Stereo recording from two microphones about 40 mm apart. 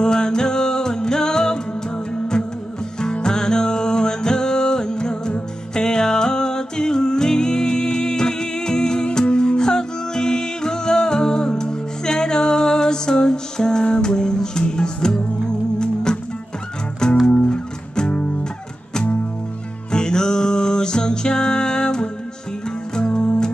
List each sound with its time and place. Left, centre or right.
0.0 s music: centre
19.9 s music: centre